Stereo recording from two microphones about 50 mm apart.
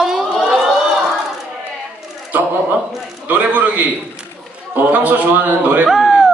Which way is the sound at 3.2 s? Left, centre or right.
Right.